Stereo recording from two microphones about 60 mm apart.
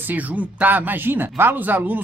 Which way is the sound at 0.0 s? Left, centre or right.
Right.